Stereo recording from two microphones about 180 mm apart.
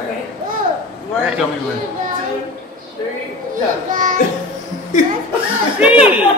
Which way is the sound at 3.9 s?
45° right (ahead or behind).